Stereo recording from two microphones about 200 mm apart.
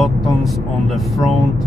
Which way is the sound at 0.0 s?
Centre (ahead or behind).